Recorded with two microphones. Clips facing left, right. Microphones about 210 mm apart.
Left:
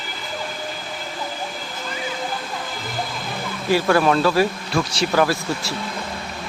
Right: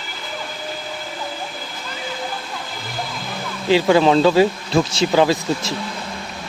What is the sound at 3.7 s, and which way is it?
Speech, 20° right (ahead or behind).